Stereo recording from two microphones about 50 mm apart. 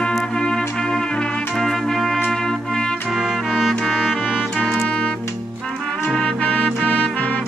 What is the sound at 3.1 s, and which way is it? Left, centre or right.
Music, centre.